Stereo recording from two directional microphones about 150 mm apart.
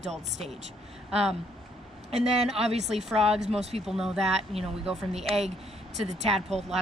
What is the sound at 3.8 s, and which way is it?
Speech, 5° right (ahead or behind).